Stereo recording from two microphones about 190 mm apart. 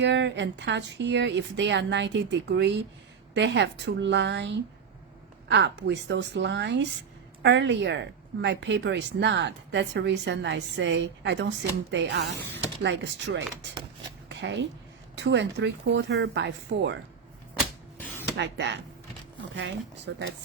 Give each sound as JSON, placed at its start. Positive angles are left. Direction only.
{"t": 0.0, "sound": "a woman's voice", "side_deg": -65}
{"t": 18.3, "sound": "a woman's voice", "side_deg": -65}